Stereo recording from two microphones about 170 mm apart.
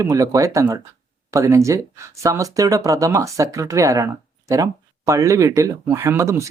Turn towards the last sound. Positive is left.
turn(degrees=-15)  # may be behind; listen again after turning